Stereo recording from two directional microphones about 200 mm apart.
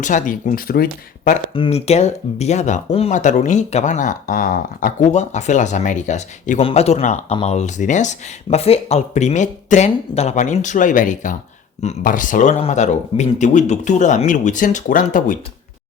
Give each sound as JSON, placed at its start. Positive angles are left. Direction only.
{"t": 0.0, "sound": "speech", "side_deg": 40}
{"t": 1.5, "sound": "speech", "side_deg": 30}